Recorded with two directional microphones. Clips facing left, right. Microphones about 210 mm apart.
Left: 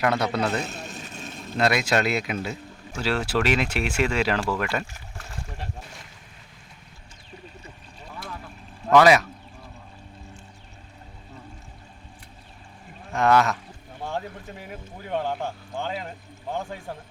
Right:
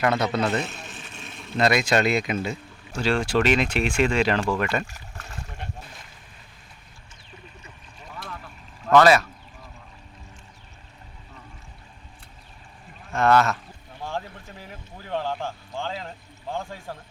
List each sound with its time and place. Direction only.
0.0 s speech: centre (ahead or behind)
0.6 s vehicle: 40° left (ahead or behind)
1.5 s speech: 5° left (ahead or behind)
8.9 s speech: 15° left (ahead or behind)
13.1 s speech: 15° left (ahead or behind)
14.7 s speech: 20° left (ahead or behind)